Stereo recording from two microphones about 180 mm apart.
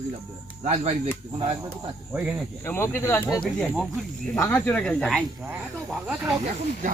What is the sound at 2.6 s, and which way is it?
Speech, 15° left (ahead or behind).